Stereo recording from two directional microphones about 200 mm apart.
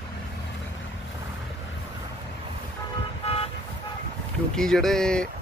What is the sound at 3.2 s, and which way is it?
Vehicle, 30° left (ahead or behind).